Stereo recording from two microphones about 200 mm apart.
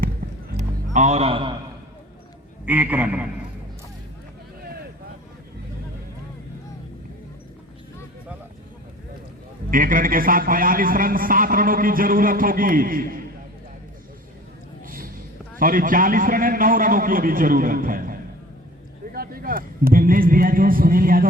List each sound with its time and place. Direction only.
0.5 s music: 35° right (ahead or behind)
2.6 s a man's voice: 10° right (ahead or behind)
9.6 s a man's voice: 45° right (ahead or behind)
14.8 s a sound: 45° right (ahead or behind)
15.5 s a man's voice: 45° right (ahead or behind)